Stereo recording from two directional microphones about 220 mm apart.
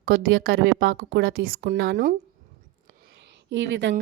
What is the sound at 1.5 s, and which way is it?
Speech, 40° right (ahead or behind).